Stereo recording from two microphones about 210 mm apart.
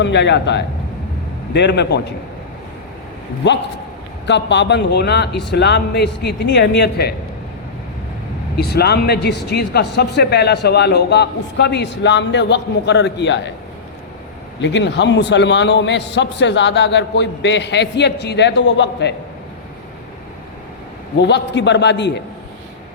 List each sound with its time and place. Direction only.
0.0 s a man's voice: 55° left (ahead or behind)
3.4 s a man's voice: 55° left (ahead or behind)
8.5 s speech: 50° left (ahead or behind)
14.6 s a man's voice: 60° left (ahead or behind)
21.2 s a man's voice: 55° left (ahead or behind)